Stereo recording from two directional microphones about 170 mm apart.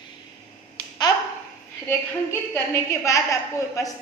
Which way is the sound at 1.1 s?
25° left (ahead or behind).